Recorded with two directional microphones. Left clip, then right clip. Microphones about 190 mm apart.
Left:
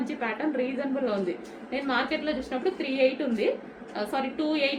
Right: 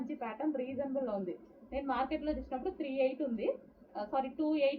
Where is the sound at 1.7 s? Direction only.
20° left (ahead or behind).